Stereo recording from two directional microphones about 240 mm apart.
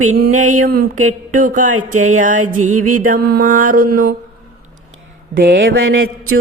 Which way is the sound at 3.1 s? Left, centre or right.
Right.